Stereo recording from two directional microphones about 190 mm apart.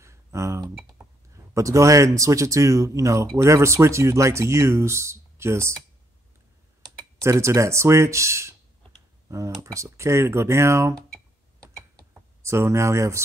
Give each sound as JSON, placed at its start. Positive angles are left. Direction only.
{"t": 0.0, "sound": "speech", "side_deg": -15}
{"t": 7.0, "sound": "speech", "side_deg": -15}
{"t": 12.1, "sound": "speech", "side_deg": -15}